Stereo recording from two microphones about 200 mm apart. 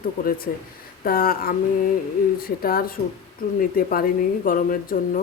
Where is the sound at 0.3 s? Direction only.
45° left (ahead or behind).